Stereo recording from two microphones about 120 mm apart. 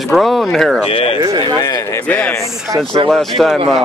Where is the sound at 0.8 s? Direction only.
50° left (ahead or behind).